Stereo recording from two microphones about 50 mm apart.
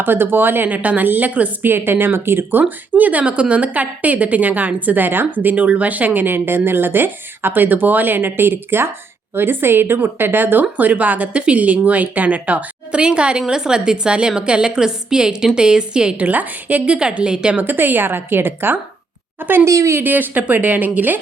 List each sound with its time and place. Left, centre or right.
0.0 s speech: right
0.8 s speech: right
1.6 s a woman's voice: right; by 16.2 s centre
16.2 s speech: right
16.8 s a woman's voice: centre
17.6 s speech: right
19.6 s speech: right
20.0 s speech: right